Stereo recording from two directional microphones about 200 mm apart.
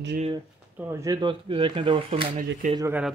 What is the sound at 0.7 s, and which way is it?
Speech, 15° right (ahead or behind).